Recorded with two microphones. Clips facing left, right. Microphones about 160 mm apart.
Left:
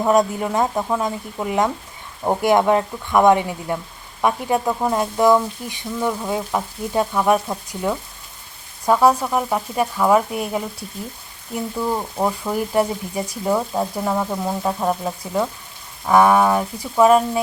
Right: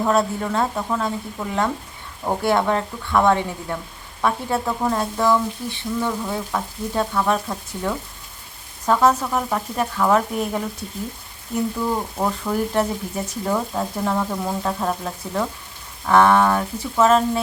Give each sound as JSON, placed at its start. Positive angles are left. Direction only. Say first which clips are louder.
{"t": 0.0, "sound": "speech", "louder": "left 3 dB", "side_deg": 15}
{"t": 12.1, "sound": "speech", "louder": "left 1 dB", "side_deg": 10}